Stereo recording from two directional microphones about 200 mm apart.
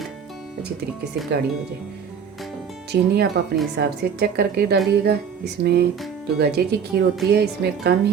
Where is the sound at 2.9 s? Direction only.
55° right (ahead or behind).